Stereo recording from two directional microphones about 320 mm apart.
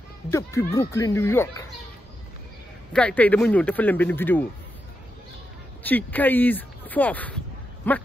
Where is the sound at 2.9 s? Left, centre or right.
Centre.